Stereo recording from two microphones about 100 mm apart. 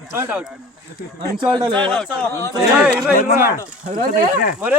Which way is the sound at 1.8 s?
10° left (ahead or behind).